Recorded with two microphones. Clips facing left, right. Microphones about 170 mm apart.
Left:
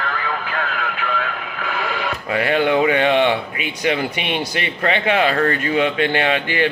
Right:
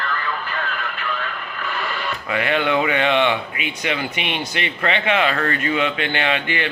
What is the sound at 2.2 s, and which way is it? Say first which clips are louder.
A man's voice: left 3 dB; 35° left (ahead or behind).